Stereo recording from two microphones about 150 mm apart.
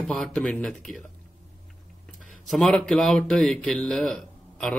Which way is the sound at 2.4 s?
Centre (ahead or behind).